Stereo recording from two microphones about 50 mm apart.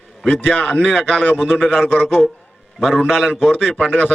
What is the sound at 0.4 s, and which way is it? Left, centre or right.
Speech, left.